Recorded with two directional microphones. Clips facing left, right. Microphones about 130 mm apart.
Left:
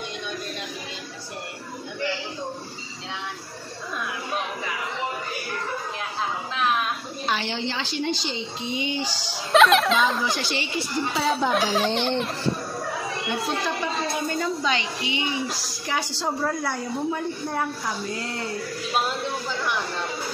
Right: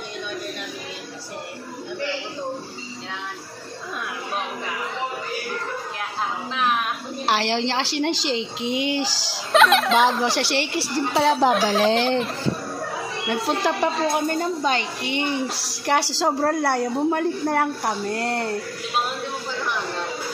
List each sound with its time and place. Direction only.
7.2 s a woman's voice: 85° right
9.5 s speech: centre (ahead or behind)
10.2 s a woman's voice: 75° right (ahead or behind)
11.7 s speech: centre (ahead or behind)
13.5 s a woman's voice: 75° right (ahead or behind)
14.4 s a woman's voice: 50° right (ahead or behind)
15.5 s a woman's voice: 70° right (ahead or behind); by 16.3 s 85° right
16.3 s a woman's voice: 65° right (ahead or behind)